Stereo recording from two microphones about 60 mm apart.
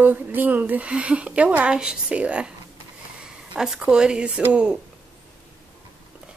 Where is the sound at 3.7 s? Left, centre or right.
Centre.